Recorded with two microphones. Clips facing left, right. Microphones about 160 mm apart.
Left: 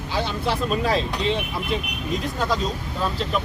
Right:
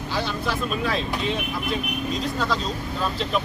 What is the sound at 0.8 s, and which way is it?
Speech, 40° left (ahead or behind).